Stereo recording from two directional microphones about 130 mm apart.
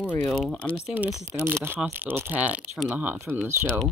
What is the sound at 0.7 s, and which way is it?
Speech, 10° right (ahead or behind).